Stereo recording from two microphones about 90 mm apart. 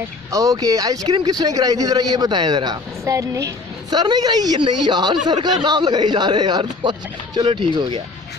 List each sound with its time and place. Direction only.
0.3 s a woman's voice: 40° right (ahead or behind)
3.1 s a woman's voice: 40° right (ahead or behind); by 8.0 s 60° right (ahead or behind)